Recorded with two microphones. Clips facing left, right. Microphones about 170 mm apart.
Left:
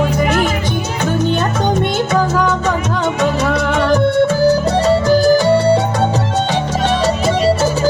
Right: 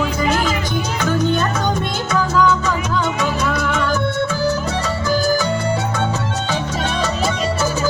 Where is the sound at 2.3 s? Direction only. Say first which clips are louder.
Left 1 dB; 60° left (ahead or behind).